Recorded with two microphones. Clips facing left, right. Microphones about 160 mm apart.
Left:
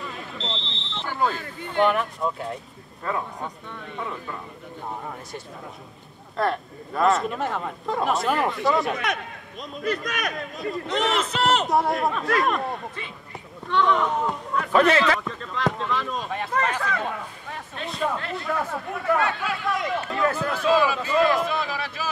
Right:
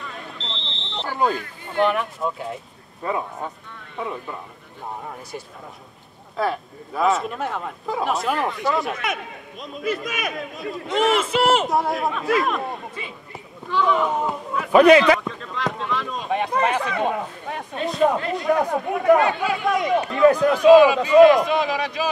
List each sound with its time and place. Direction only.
1.0 s a sound: 15° right (ahead or behind)
1.8 s speech: centre (ahead or behind)
3.0 s a man's voice: 15° right (ahead or behind)
6.3 s a man's voice: centre (ahead or behind)
15.1 s speech: centre (ahead or behind)
16.3 s a man's voice: 15° right (ahead or behind)